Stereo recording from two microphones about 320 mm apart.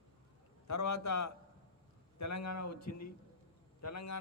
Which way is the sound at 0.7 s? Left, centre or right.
Left.